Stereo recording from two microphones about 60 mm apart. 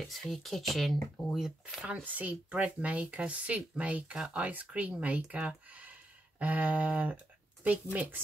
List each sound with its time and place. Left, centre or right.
0.0 s speech: centre
2.1 s speech: right